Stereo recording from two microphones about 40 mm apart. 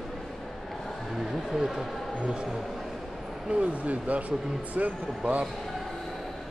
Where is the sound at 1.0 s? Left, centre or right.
Centre.